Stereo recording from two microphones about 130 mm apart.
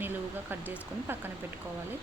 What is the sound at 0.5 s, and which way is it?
Speech, 15° right (ahead or behind).